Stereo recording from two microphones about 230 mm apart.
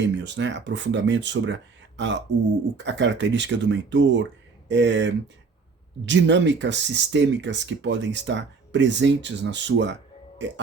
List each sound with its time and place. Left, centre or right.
0.0 s speech: right